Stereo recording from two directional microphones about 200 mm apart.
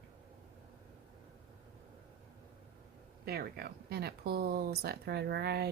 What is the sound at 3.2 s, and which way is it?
Speech, 50° right (ahead or behind).